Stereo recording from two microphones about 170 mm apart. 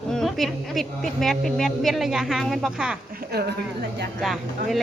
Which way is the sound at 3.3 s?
70° right (ahead or behind).